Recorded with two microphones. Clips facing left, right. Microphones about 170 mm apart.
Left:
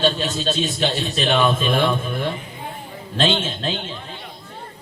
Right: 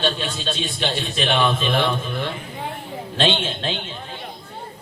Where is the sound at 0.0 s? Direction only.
40° left (ahead or behind).